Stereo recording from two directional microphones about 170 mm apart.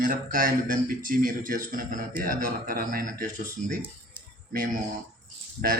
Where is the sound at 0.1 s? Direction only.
55° right (ahead or behind).